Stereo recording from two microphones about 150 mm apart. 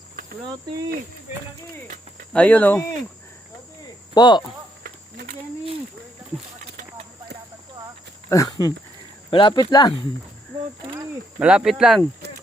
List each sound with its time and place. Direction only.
2.3 s speech: 10° left (ahead or behind)
3.8 s cricket: 25° left (ahead or behind)
4.8 s a sound: 75° right (ahead or behind)
8.3 s speech: 25° left (ahead or behind)
11.3 s speech: 5° right (ahead or behind)